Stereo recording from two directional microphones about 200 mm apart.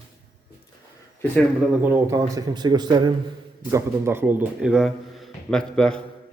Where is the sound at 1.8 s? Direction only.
15° right (ahead or behind).